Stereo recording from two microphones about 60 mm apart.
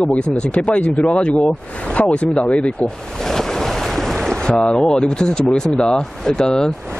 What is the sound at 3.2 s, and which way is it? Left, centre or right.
Boat, centre.